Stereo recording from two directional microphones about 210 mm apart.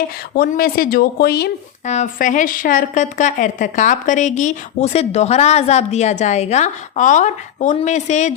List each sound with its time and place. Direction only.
0.3 s speech: 45° left (ahead or behind)
1.9 s a woman's voice: 35° left (ahead or behind)